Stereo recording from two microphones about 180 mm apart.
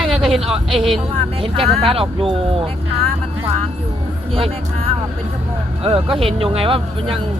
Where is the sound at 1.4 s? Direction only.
30° right (ahead or behind).